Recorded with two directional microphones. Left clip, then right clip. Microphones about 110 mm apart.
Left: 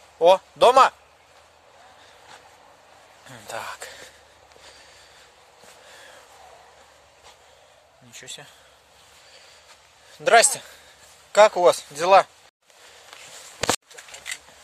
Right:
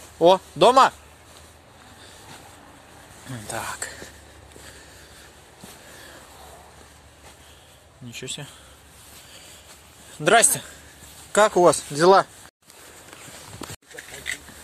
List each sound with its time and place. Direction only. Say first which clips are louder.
0.2 s speech: even; 55° left (ahead or behind)
3.3 s a sound: right 2 dB; 90° left
8.1 s speech: right 5 dB; 25° left (ahead or behind)
10.2 s a man's voice: left 1 dB; 90° left
11.3 s speech: left 1 dB; 75° left (ahead or behind); by 11.8 s 60° left (ahead or behind)
11.9 s speech: even; 40° left (ahead or behind)